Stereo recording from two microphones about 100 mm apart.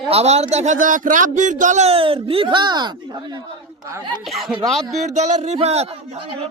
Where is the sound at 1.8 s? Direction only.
75° right (ahead or behind); by 2.9 s 45° right (ahead or behind).